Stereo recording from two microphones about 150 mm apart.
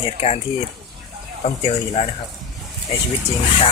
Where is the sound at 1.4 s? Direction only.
50° left (ahead or behind).